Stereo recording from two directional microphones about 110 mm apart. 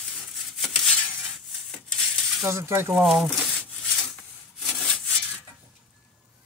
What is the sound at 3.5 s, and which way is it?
Rub, 10° left (ahead or behind).